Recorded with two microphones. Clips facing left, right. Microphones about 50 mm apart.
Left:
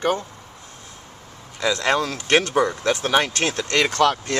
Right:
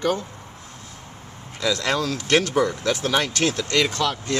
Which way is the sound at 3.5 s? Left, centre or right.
Left.